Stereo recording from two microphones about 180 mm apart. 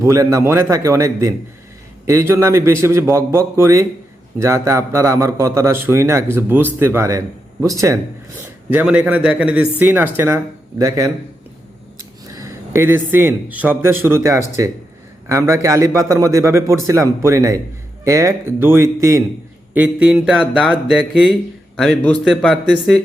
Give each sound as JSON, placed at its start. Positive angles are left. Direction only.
{"t": 0.0, "sound": "speech", "side_deg": -15}
{"t": 12.3, "sound": "speech", "side_deg": -15}
{"t": 19.7, "sound": "a sound", "side_deg": -5}